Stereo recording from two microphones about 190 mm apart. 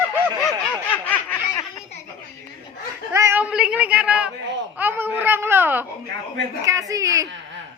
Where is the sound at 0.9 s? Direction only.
10° left (ahead or behind).